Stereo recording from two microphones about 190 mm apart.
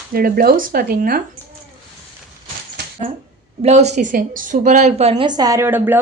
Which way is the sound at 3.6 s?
35° right (ahead or behind).